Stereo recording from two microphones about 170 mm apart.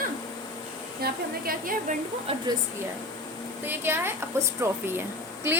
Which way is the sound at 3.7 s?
15° right (ahead or behind).